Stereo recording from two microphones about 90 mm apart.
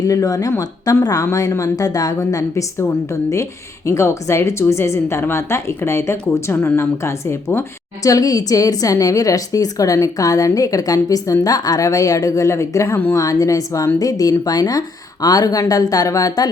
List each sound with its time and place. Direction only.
0.0 s a woman's voice: 40° left (ahead or behind)
2.7 s a woman's voice: 30° left (ahead or behind)